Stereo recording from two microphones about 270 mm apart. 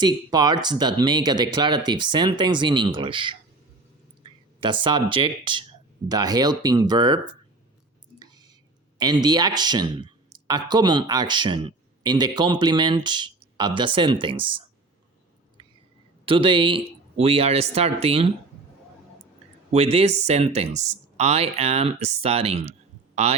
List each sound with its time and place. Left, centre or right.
0.0 s speech: centre
9.0 s speech: centre
16.2 s speech: centre
19.7 s speech: right